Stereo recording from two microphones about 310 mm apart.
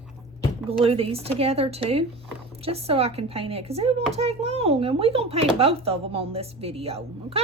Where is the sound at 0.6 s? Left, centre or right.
Centre.